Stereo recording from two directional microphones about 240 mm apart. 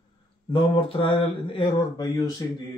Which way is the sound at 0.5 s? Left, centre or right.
Left.